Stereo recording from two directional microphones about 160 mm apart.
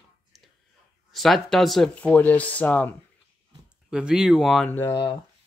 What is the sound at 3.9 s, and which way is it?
Speech, 5° right (ahead or behind).